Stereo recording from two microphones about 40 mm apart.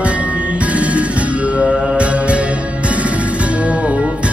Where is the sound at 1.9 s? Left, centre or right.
Right.